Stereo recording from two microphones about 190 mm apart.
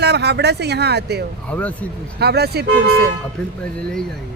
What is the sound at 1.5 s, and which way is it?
Speech, 10° left (ahead or behind).